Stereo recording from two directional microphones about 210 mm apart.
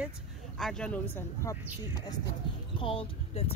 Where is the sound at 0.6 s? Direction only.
5° left (ahead or behind).